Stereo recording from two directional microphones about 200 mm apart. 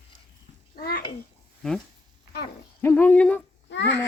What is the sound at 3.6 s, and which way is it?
Babbling, 60° left (ahead or behind).